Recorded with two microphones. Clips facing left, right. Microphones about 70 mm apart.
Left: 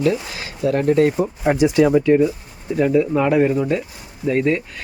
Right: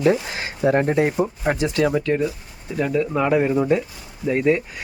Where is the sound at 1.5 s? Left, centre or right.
Centre.